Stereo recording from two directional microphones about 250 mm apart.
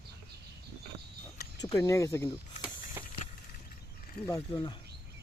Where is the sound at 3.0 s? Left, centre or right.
Centre.